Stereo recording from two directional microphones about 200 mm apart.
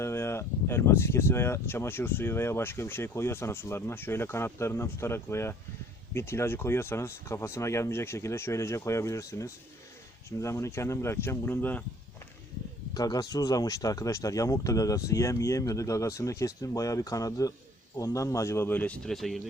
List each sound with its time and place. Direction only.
0.0 s speech: 15° left (ahead or behind)
12.9 s speech: 20° left (ahead or behind); by 19.4 s centre (ahead or behind)